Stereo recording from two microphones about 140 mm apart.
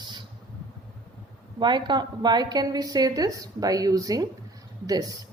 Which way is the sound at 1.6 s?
35° right (ahead or behind).